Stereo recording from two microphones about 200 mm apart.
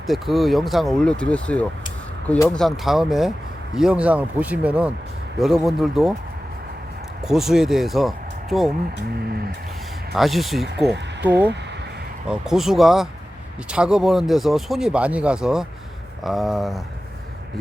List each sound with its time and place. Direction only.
0.1 s speech: centre (ahead or behind)
7.3 s speech: centre (ahead or behind)
10.2 s speech: centre (ahead or behind)
10.9 s speech: 60° right (ahead or behind)
12.3 s speech: centre (ahead or behind)